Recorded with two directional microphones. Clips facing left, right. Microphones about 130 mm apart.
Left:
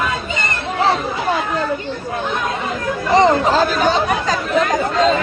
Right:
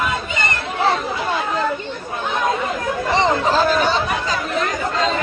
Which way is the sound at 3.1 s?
45° left (ahead or behind).